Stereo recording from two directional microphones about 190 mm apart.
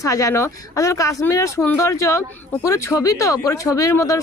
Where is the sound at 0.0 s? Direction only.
15° left (ahead or behind).